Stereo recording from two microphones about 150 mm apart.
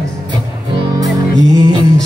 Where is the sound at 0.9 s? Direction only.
20° right (ahead or behind).